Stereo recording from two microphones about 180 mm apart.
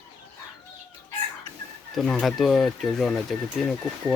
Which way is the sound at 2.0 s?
Centre (ahead or behind).